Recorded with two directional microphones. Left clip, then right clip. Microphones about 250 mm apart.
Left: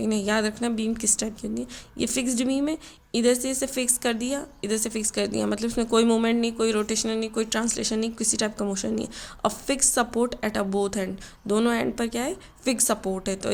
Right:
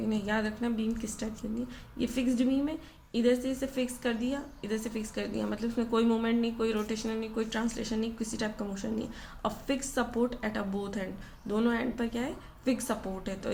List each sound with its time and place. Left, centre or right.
0.0 s a woman's voice: left